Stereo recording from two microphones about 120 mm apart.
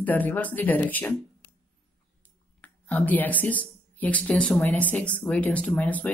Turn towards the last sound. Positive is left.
turn(degrees=15)  # may be behind; listen again after turning